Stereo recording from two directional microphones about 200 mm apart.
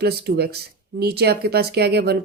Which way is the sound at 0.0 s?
55° right (ahead or behind).